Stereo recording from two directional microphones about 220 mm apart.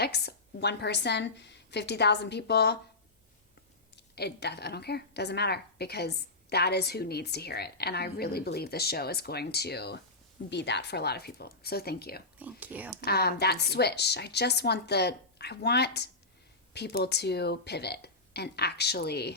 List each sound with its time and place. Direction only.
0.0 s a woman's voice: 50° left (ahead or behind)
3.9 s a woman's voice: 45° left (ahead or behind)
12.4 s speech: 5° right (ahead or behind)
13.1 s a woman's voice: 45° left (ahead or behind)